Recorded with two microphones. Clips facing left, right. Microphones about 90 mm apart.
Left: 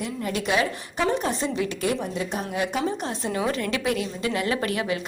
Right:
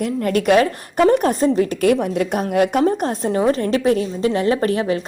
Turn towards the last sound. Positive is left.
turn(degrees=-35)  # may be behind; listen again after turning